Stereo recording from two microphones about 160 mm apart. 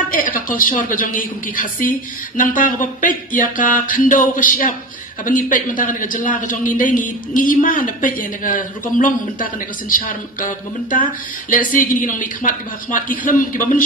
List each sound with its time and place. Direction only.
0.1 s a man's voice: 60° left (ahead or behind)